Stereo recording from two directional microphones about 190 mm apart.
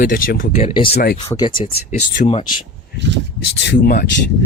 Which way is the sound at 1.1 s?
20° left (ahead or behind).